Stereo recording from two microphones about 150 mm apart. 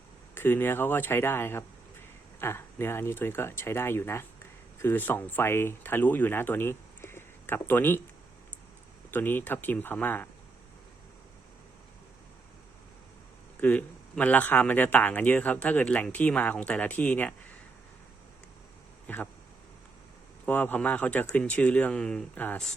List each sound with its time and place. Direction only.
0.3 s speech: 15° left (ahead or behind)
9.0 s speech: 15° left (ahead or behind)
13.6 s speech: 10° left (ahead or behind)
19.0 s speech: 10° left (ahead or behind)
20.4 s speech: 10° left (ahead or behind)